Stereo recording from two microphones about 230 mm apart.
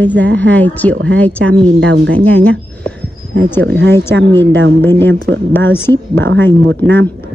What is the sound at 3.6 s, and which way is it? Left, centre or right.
Speech, right.